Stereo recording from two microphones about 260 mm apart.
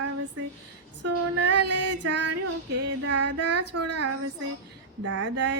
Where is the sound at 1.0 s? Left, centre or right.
Right.